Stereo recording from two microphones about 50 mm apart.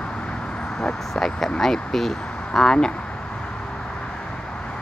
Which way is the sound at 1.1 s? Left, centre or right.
Centre.